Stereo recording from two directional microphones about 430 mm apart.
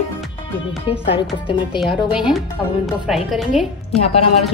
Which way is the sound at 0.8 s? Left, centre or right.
Centre.